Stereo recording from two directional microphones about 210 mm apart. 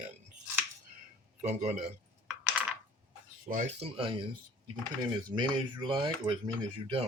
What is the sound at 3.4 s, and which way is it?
Speech, 35° right (ahead or behind).